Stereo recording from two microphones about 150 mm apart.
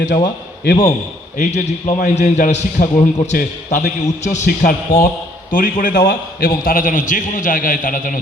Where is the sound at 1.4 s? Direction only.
45° left (ahead or behind).